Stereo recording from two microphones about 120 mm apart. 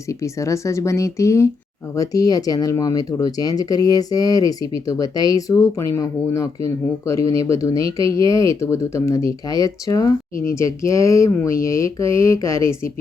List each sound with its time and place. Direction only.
0.1 s speech: 25° left (ahead or behind)